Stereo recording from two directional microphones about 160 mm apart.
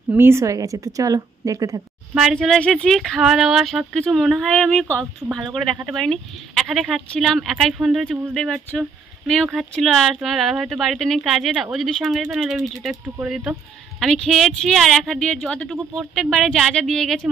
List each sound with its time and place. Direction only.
0.1 s a woman's voice: 15° right (ahead or behind)
2.1 s speech: centre (ahead or behind)